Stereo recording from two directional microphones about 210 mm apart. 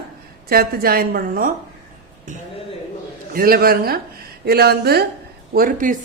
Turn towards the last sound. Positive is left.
turn(degrees=-40)  # may be behind; listen again after turning